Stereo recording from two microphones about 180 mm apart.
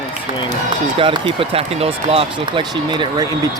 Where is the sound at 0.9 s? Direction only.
30° right (ahead or behind).